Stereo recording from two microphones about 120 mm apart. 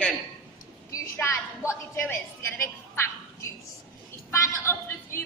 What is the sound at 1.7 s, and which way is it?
Speech, 20° left (ahead or behind).